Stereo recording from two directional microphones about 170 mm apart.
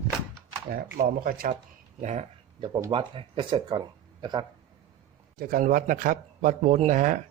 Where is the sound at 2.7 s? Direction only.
20° right (ahead or behind).